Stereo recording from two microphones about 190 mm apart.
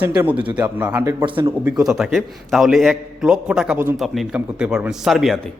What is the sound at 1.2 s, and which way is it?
Speech, 25° right (ahead or behind).